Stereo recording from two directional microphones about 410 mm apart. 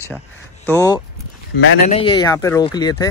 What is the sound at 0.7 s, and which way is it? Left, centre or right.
Speech, centre.